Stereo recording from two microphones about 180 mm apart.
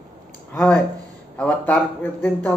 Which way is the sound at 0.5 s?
Centre (ahead or behind).